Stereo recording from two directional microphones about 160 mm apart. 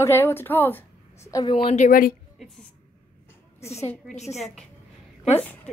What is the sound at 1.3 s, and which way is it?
Speech, 30° left (ahead or behind).